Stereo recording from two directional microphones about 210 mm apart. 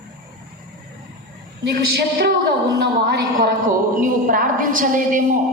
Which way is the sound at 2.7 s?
50° right (ahead or behind).